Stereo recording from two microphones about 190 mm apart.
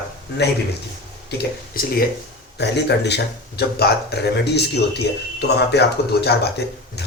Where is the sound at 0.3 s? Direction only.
65° left (ahead or behind).